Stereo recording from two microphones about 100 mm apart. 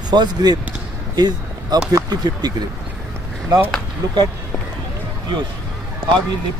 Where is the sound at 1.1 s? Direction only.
40° right (ahead or behind).